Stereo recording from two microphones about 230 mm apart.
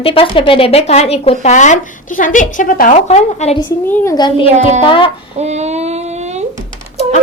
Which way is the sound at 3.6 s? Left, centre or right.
Centre.